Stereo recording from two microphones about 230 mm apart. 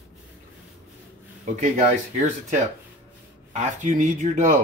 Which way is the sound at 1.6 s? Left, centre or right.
Right.